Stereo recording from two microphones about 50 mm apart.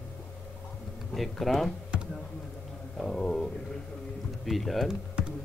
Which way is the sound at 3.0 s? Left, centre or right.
Centre.